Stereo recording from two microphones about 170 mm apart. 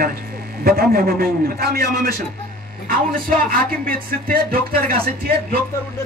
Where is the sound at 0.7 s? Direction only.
60° right (ahead or behind).